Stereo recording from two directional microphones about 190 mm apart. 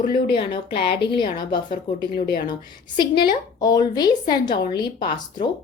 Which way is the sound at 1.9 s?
55° left (ahead or behind).